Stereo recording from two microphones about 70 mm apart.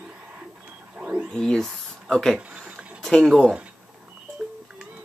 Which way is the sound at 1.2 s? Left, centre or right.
Centre.